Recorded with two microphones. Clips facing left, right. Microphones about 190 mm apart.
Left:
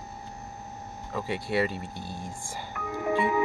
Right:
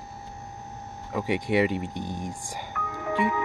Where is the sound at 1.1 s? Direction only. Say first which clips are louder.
Right 4 dB; 15° right (ahead or behind).